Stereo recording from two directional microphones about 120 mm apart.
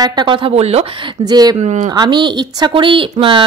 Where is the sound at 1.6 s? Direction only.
70° right (ahead or behind).